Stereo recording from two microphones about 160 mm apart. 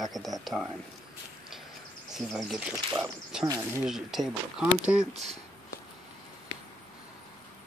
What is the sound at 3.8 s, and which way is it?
Speech, centre (ahead or behind).